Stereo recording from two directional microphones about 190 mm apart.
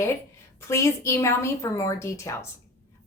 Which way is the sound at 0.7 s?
15° left (ahead or behind).